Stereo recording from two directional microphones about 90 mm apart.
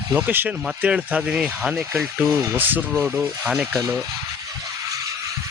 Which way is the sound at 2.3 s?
20° right (ahead or behind).